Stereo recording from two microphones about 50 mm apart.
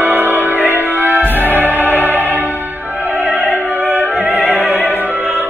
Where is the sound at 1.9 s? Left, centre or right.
Left.